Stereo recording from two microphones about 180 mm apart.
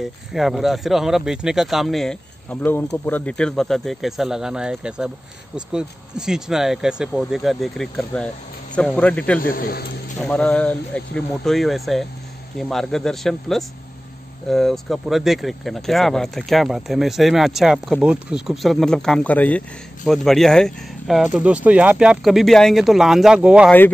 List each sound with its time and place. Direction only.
0.0 s a man's voice: centre (ahead or behind)
9.4 s speech: 55° left (ahead or behind)
10.2 s speech: 5° left (ahead or behind)